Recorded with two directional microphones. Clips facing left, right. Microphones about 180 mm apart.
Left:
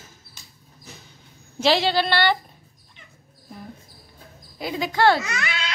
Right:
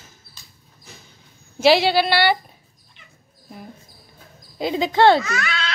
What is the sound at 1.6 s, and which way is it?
Speech, 10° right (ahead or behind).